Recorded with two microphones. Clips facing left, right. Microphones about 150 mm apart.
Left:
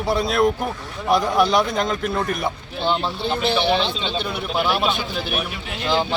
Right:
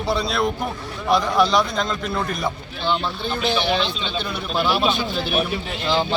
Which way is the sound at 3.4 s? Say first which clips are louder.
Left 1 dB; 60° left (ahead or behind).